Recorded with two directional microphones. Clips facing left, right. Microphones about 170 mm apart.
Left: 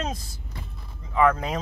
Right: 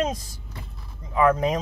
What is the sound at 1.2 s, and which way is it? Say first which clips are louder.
Speech: right 2 dB; 15° right (ahead or behind).